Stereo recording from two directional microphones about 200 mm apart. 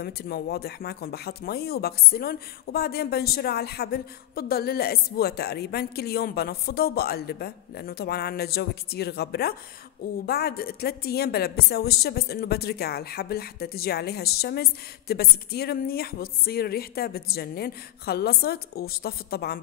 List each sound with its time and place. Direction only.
0.0 s speech: 50° left (ahead or behind)